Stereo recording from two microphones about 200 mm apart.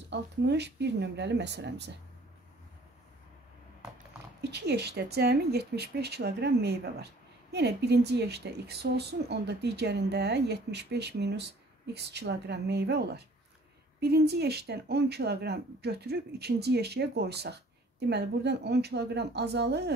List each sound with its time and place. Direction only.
0.1 s a woman's voice: 60° right (ahead or behind)
4.4 s a woman's voice: 55° right (ahead or behind)